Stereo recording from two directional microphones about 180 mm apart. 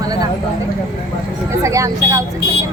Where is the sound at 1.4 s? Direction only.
15° right (ahead or behind).